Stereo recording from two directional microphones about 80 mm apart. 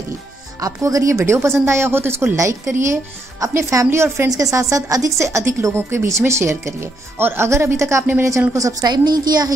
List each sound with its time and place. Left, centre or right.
0.6 s a woman's voice: right
8.8 s a woman's voice: right